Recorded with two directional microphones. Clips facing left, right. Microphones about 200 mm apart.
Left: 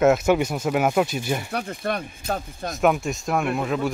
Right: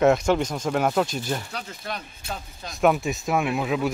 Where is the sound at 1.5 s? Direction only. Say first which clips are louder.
Left 7 dB; 55° left (ahead or behind).